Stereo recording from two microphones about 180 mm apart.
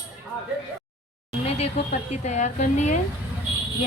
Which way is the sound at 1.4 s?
35° left (ahead or behind).